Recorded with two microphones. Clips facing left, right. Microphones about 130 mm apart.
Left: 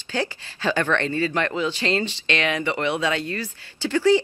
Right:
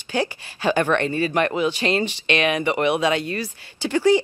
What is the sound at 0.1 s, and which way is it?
Speech, 15° right (ahead or behind).